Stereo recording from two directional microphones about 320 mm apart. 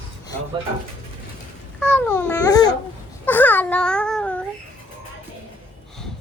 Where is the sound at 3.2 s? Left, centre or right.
Centre.